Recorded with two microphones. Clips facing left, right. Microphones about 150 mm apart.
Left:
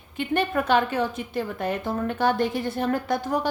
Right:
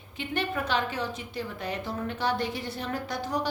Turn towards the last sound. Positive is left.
turn(degrees=50)  # may be behind; listen again after turning